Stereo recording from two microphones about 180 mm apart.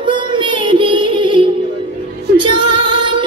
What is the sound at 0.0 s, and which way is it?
Music, 25° right (ahead or behind).